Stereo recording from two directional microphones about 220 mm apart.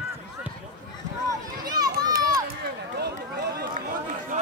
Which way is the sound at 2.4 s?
45° right (ahead or behind).